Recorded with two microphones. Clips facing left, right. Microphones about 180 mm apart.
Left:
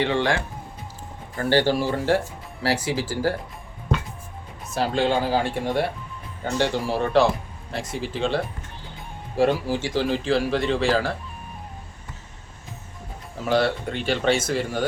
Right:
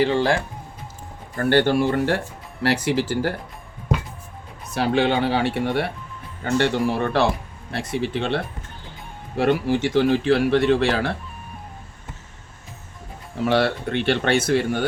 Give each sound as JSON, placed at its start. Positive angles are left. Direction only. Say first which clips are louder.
{"t": 0.0, "sound": "speech", "louder": "right 3 dB", "side_deg": -35}
{"t": 1.4, "sound": "speech", "louder": "right 3 dB", "side_deg": -55}
{"t": 4.7, "sound": "speech", "louder": "right 2 dB", "side_deg": -65}
{"t": 9.4, "sound": "speech", "louder": "right 2 dB", "side_deg": -65}
{"t": 13.4, "sound": "speech", "louder": "right 2 dB", "side_deg": -65}